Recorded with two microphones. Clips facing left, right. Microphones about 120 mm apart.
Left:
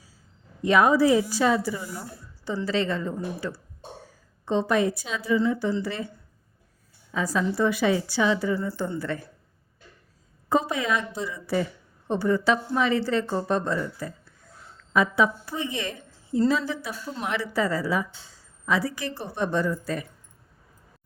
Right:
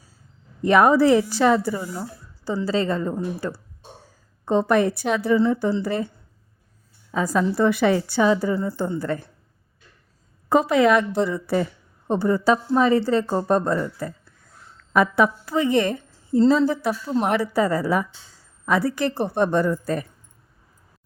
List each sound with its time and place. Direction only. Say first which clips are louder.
0.6 s a woman's voice: right 3 dB; 50° right (ahead or behind)
1.7 s a woman's voice: right 5 dB; 30° right (ahead or behind); by 5.4 s 60° right (ahead or behind)
5.4 s a woman's voice: right 4 dB; 45° right (ahead or behind)
7.1 s a woman's voice: right 4 dB; 40° right (ahead or behind)
10.5 s a woman's voice: right 8 dB; 80° right; by 11.6 s 55° right (ahead or behind)
12.0 s a woman's voice: right 3 dB; 35° right (ahead or behind)
14.9 s a woman's voice: right 4 dB; 60° right (ahead or behind); by 15.8 s 90° right
15.8 s a sound: right 10 dB; 50° right (ahead or behind)
16.5 s a woman's voice: right 8 dB; 45° right (ahead or behind)